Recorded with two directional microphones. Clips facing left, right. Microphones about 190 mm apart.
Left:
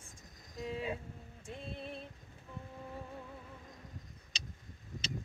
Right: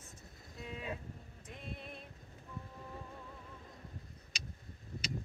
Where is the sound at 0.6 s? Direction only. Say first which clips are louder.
Left 7 dB; 35° left (ahead or behind).